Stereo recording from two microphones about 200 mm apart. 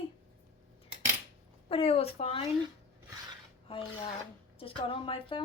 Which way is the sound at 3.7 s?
25° left (ahead or behind).